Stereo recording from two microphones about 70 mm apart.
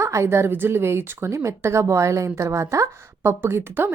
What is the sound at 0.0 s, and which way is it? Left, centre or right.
A woman's voice, right.